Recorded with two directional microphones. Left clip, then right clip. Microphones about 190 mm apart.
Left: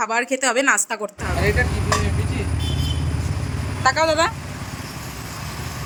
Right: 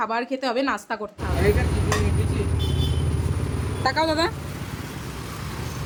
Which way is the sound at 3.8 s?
20° right (ahead or behind).